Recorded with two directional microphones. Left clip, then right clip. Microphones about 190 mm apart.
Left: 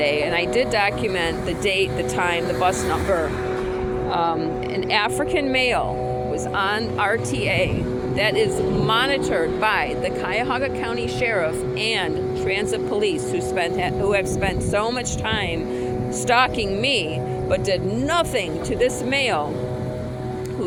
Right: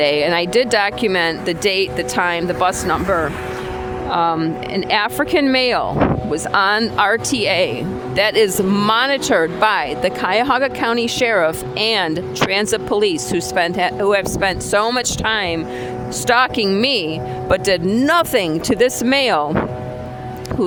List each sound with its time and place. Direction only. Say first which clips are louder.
0.0 s speech: right 5 dB; 45° right (ahead or behind)
4.1 s music: right 6 dB; 40° right (ahead or behind)
4.9 s speech: right 4 dB; 50° right (ahead or behind)
16.6 s speech: right 5 dB; 65° right (ahead or behind)
18.0 s speech: right 7 dB; 55° right (ahead or behind)